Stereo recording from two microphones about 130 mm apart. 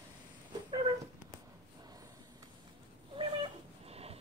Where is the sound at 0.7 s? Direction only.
40° right (ahead or behind).